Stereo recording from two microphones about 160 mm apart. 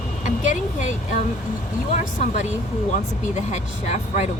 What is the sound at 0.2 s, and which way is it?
Speech, 50° left (ahead or behind).